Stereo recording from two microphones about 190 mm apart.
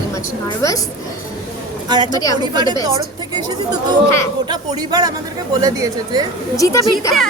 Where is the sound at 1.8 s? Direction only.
25° right (ahead or behind).